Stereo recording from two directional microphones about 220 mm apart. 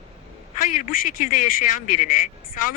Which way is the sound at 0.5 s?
40° left (ahead or behind).